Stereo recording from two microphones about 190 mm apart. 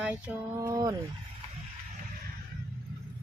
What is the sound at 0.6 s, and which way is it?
Speech, 20° right (ahead or behind).